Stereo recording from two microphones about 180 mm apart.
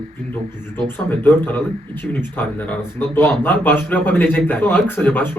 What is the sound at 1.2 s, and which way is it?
A man's voice, 10° left (ahead or behind).